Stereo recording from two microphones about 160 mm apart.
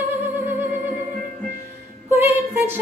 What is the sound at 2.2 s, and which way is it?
Music, 15° right (ahead or behind).